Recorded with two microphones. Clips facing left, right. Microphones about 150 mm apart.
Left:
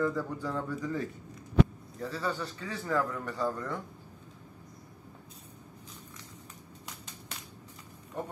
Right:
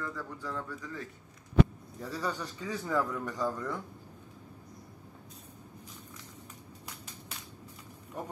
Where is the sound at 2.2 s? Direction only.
15° right (ahead or behind).